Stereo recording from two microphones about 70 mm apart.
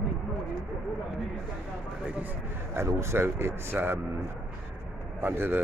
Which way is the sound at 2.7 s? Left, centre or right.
Right.